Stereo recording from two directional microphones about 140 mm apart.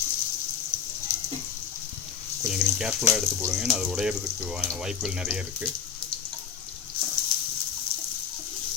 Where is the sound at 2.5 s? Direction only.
5° right (ahead or behind).